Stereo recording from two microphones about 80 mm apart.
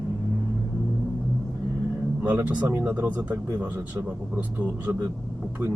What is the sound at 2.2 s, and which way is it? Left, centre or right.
A man's voice, right.